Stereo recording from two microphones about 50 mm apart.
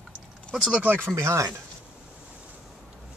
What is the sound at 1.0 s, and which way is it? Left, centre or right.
Speech, right.